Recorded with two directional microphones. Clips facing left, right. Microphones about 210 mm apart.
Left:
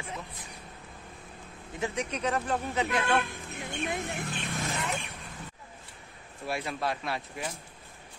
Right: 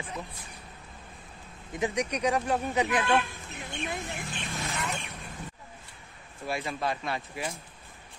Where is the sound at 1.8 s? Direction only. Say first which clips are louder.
Right 3 dB; 15° right (ahead or behind).